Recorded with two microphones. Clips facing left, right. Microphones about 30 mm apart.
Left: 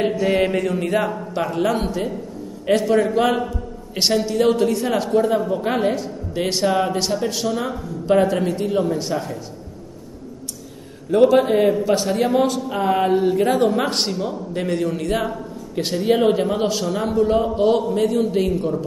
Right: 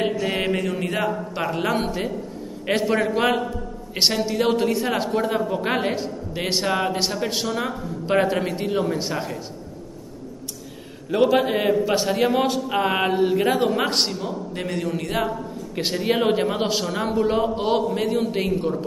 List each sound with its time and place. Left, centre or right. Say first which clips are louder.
0.0 s a man's voice: left 4 dB; centre
7.2 s a man's voice: left 2 dB; right
11.1 s a man's voice: left 4 dB; centre
13.0 s a man's voice: left 2 dB; centre
15.7 s a man's voice: left 4 dB; centre